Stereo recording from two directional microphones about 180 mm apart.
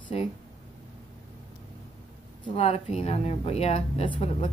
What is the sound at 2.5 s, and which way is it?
A woman's voice, 35° left (ahead or behind).